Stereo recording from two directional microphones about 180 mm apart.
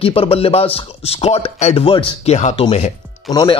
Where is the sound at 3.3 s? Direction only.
25° left (ahead or behind).